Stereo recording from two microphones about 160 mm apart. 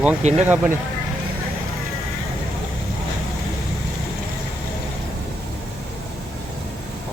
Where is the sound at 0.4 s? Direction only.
15° right (ahead or behind).